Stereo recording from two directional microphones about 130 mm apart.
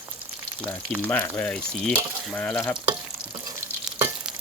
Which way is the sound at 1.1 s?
15° left (ahead or behind).